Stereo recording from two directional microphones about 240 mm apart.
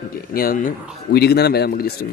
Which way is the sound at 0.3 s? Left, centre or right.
Left.